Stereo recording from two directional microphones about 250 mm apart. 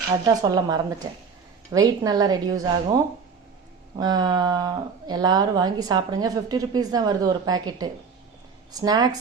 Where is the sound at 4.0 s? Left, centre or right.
Centre.